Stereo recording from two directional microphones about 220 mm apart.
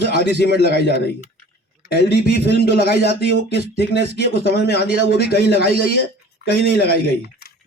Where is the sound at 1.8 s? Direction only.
45° left (ahead or behind).